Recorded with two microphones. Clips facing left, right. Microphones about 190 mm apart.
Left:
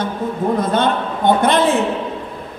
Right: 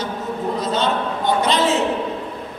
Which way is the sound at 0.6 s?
55° left (ahead or behind).